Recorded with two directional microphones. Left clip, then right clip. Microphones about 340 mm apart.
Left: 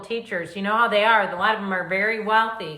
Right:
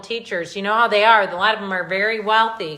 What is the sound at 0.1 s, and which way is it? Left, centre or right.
A woman's voice, centre.